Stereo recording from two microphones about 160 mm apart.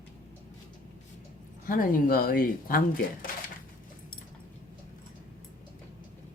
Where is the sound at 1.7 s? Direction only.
65° left (ahead or behind).